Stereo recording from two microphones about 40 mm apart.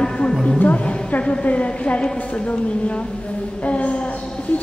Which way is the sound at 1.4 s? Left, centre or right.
Left.